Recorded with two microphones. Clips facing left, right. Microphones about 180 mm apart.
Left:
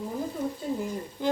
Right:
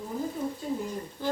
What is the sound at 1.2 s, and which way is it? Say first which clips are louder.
Speech: left 3 dB; 15° left (ahead or behind).